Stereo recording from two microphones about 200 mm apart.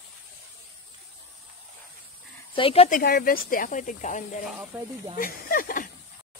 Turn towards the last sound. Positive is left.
turn(degrees=45)  # may be behind; listen again after turning